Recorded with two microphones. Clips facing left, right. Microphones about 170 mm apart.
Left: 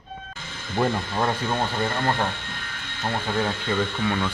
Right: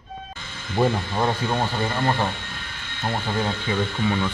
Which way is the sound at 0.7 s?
5° right (ahead or behind).